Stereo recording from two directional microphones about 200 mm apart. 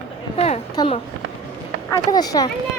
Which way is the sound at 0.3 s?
30° left (ahead or behind).